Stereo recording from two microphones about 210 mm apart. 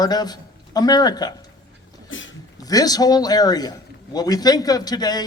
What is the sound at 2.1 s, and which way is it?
Speech, 65° left (ahead or behind).